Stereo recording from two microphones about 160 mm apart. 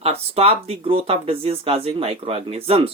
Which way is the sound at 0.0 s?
40° right (ahead or behind).